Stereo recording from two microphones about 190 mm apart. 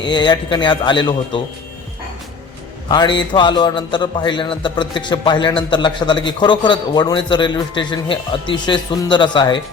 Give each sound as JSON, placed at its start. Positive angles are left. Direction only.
{"t": 0.0, "sound": "a man's voice", "side_deg": 25}
{"t": 2.9, "sound": "a man's voice", "side_deg": 25}